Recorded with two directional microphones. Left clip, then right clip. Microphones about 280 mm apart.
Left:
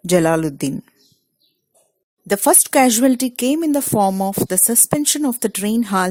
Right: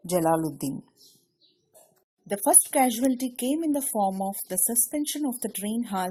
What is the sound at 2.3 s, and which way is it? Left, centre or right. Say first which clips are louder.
A woman's voice: left 9 dB; left.